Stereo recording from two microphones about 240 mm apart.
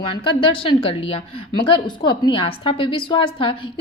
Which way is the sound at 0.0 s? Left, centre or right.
Left.